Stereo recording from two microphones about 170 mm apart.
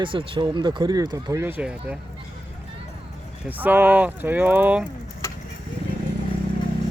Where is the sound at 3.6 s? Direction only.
10° right (ahead or behind).